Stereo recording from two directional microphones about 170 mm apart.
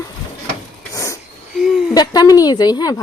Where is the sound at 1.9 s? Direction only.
25° left (ahead or behind).